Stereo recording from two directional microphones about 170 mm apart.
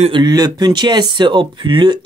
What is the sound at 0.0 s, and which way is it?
Speech, 25° right (ahead or behind).